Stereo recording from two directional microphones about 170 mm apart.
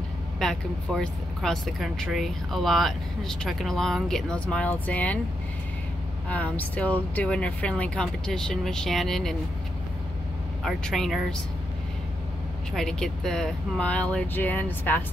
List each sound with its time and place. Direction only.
0.4 s speech: centre (ahead or behind)
6.2 s speech: 10° left (ahead or behind)
10.6 s speech: centre (ahead or behind)
12.7 s speech: 5° left (ahead or behind)